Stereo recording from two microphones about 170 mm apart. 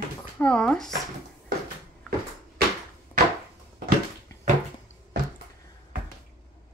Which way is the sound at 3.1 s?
10° left (ahead or behind).